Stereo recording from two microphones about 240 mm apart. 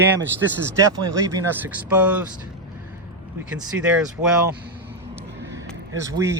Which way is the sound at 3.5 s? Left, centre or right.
Centre.